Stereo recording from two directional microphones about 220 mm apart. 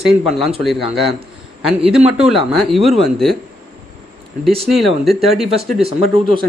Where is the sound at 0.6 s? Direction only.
Centre (ahead or behind).